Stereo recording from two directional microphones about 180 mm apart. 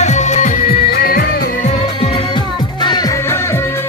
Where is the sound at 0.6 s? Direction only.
55° left (ahead or behind).